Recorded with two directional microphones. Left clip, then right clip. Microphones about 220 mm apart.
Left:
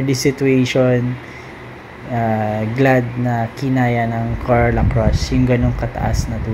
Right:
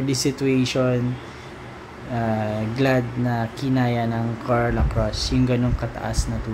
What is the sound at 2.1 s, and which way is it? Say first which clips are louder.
Speech: left 6 dB; 5° left (ahead or behind).